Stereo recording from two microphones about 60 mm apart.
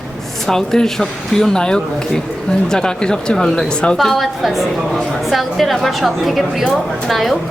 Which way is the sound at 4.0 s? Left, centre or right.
Centre.